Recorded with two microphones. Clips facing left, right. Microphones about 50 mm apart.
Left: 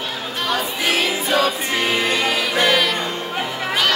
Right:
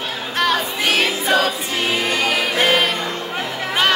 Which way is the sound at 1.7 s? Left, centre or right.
Left.